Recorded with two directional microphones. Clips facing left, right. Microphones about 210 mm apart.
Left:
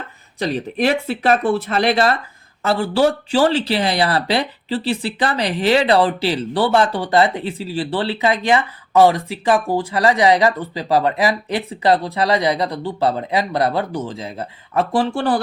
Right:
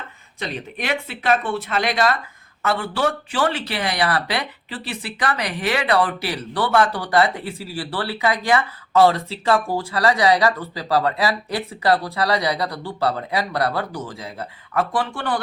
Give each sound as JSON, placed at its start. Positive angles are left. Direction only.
{"t": 0.3, "sound": "speech", "side_deg": 35}